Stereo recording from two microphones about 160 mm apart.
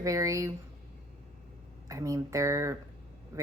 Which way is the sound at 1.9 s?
20° right (ahead or behind).